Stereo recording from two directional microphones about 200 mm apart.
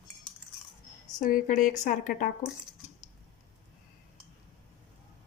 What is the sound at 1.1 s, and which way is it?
A woman's voice, 40° left (ahead or behind).